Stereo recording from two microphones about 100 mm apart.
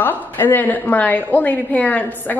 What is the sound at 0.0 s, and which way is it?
A woman's voice, 20° left (ahead or behind).